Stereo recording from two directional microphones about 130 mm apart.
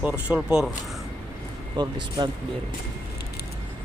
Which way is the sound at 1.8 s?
35° right (ahead or behind).